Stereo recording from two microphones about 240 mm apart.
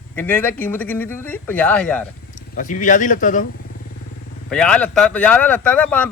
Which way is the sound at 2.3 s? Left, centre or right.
Left.